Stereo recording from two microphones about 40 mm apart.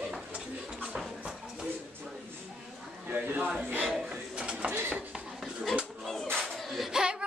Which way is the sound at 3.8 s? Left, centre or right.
Centre.